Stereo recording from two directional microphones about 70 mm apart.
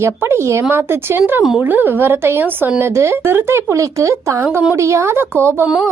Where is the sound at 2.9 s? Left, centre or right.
Right.